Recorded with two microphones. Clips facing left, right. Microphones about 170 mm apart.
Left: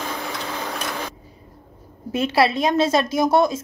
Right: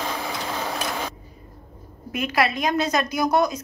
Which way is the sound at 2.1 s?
30° left (ahead or behind).